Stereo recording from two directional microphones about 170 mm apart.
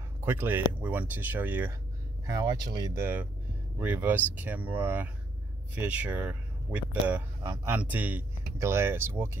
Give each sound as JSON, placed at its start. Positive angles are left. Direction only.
{"t": 0.2, "sound": "speech", "side_deg": -15}
{"t": 2.2, "sound": "speech", "side_deg": -20}